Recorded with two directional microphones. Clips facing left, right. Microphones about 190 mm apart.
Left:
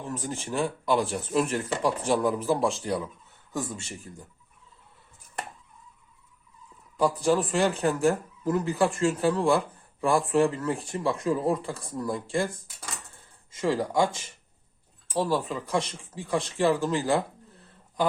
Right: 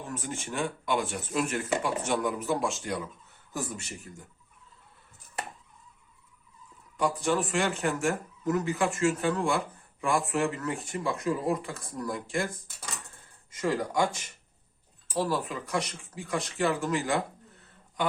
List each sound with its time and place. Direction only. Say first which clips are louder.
0.1 s speech: left 4 dB; 35° left (ahead or behind)
6.9 s speech: left 4 dB; 35° left (ahead or behind)
13.5 s speech: left 3 dB; 25° left (ahead or behind)
15.2 s speech: left 3 dB; 30° left (ahead or behind)